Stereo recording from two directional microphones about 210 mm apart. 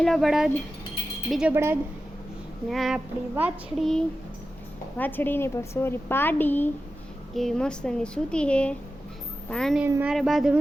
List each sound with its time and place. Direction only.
0.0 s a child's voice: centre (ahead or behind)
2.6 s a child's voice: centre (ahead or behind)
9.8 s a child's voice: 10° right (ahead or behind)